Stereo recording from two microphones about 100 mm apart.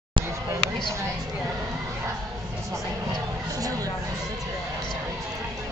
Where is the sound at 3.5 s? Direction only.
35° right (ahead or behind).